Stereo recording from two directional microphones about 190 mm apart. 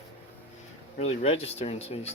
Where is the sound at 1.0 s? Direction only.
30° left (ahead or behind).